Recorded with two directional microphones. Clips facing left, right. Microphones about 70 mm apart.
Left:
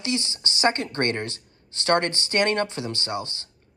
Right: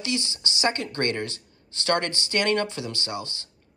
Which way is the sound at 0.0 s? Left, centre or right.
Left.